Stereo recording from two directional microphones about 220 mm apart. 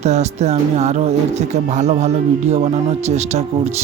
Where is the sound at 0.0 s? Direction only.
30° right (ahead or behind).